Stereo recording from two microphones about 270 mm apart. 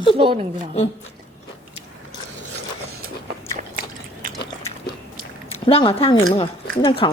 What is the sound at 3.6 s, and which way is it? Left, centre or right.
Biting, right.